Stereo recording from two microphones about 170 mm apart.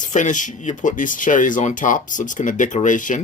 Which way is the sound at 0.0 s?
45° left (ahead or behind).